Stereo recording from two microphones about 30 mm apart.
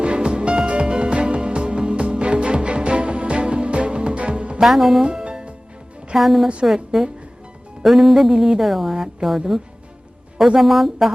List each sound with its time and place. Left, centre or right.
0.0 s music: right
4.1 s music: right
4.6 s speech: centre
5.0 s music: right
6.1 s speech: centre
10.6 s speech: centre